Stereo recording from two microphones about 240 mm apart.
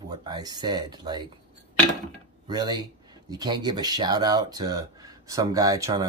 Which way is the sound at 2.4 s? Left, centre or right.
Centre.